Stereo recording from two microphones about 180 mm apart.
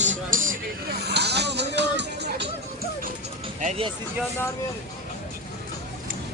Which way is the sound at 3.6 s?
40° right (ahead or behind).